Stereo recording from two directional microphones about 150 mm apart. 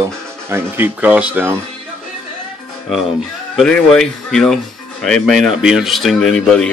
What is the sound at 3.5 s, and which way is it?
Speech, 5° left (ahead or behind).